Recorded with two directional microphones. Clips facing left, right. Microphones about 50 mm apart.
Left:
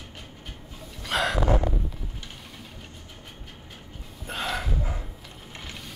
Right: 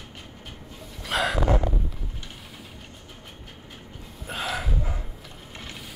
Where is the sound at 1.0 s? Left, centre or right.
Centre.